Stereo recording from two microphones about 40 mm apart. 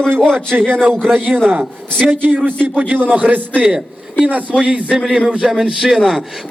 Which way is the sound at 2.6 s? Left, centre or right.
Right.